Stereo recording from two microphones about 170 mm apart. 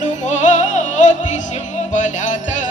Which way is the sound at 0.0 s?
45° left (ahead or behind).